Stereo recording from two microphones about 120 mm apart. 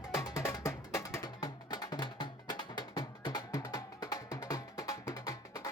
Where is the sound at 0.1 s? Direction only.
25° left (ahead or behind).